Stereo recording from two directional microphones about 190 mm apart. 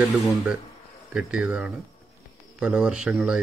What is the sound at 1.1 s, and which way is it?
A man's voice, 5° right (ahead or behind).